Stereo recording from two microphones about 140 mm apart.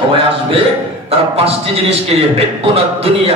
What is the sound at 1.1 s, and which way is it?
A man's voice, 45° right (ahead or behind).